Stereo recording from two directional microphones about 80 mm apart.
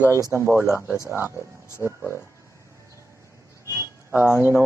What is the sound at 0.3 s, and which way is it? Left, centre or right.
Speech, right.